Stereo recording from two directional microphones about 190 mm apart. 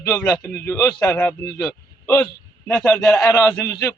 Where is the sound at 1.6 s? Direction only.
15° left (ahead or behind).